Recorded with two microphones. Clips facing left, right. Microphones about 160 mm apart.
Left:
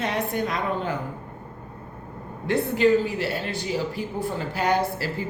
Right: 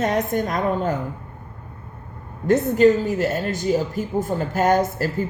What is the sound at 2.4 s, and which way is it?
Speech, 45° right (ahead or behind).